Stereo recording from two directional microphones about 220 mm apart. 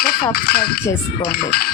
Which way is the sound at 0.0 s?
45° left (ahead or behind).